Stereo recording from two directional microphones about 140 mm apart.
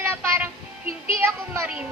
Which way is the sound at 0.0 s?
15° right (ahead or behind).